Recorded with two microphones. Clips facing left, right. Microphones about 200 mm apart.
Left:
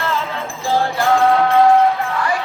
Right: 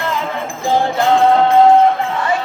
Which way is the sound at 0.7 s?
20° right (ahead or behind).